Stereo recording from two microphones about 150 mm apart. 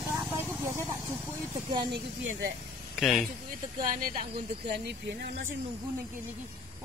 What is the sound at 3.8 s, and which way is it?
Speech, 70° right (ahead or behind).